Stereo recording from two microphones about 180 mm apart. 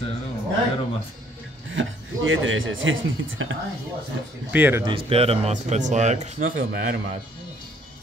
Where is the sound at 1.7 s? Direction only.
90° right.